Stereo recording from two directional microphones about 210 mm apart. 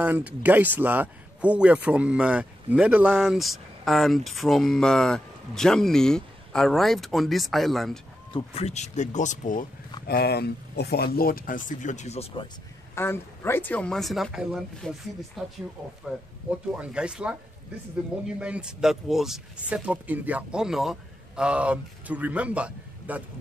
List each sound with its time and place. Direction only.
0.0 s speech: 5° right (ahead or behind)
8.3 s speech: 25° left (ahead or behind)
10.0 s speech: 50° left (ahead or behind); by 12.4 s 30° left (ahead or behind)
12.9 s speech: 10° left (ahead or behind)
16.7 s speech: 5° right (ahead or behind)